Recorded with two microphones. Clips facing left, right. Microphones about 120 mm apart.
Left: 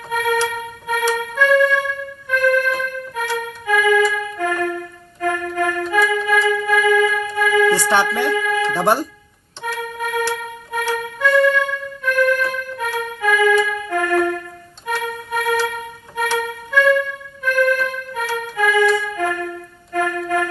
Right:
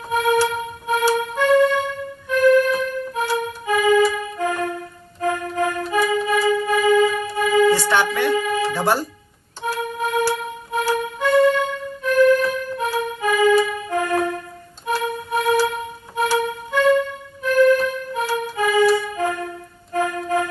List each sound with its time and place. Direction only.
0.4 s a sound: 25° right (ahead or behind)
1.2 s music: 25° right (ahead or behind)
8.7 s speech: 25° left (ahead or behind)
9.6 s music: 30° right (ahead or behind)
10.8 s music: 35° right (ahead or behind)
11.2 s music: 25° right (ahead or behind)